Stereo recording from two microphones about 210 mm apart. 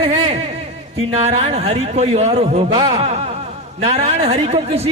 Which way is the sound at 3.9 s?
30° right (ahead or behind).